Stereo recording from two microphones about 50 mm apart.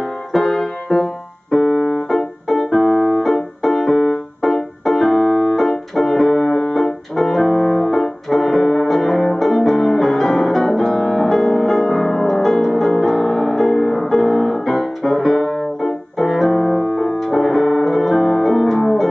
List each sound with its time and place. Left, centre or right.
0.0 s keyboard: centre
1.7 s music: left
2.0 s music: centre
4.4 s keyboard: centre
6.7 s music: centre